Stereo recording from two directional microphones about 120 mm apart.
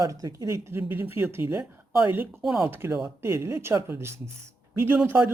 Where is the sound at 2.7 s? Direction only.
20° right (ahead or behind).